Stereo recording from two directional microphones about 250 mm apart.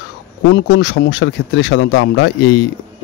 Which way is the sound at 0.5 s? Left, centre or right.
Left.